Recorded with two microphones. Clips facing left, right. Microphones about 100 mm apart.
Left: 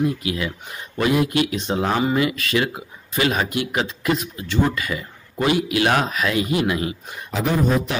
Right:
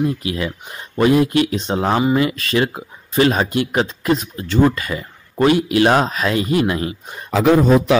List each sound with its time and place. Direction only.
0.0 s speech: 30° right (ahead or behind)
7.3 s speech: 90° right